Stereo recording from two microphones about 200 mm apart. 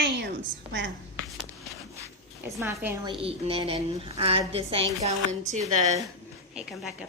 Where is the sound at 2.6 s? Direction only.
10° right (ahead or behind).